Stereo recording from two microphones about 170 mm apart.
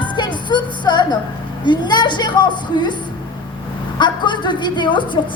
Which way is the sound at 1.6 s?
25° left (ahead or behind).